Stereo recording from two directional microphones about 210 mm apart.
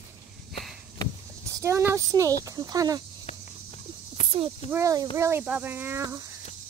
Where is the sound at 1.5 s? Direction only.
15° right (ahead or behind).